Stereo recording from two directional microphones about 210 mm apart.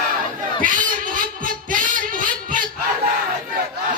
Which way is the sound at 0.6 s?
40° right (ahead or behind).